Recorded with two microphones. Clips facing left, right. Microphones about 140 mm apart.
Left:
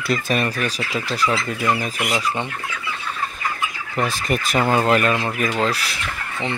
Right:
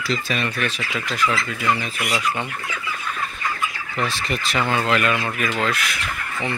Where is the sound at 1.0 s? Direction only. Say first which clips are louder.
Left 1 dB; 35° left (ahead or behind).